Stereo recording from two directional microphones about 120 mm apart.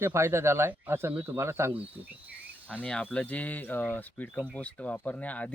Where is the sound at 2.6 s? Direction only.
10° left (ahead or behind).